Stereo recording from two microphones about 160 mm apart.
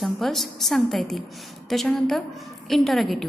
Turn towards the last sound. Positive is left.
turn(degrees=0)  # may be behind; listen again after turning